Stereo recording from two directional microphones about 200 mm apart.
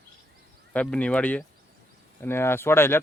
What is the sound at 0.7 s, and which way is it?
Speech, 5° left (ahead or behind).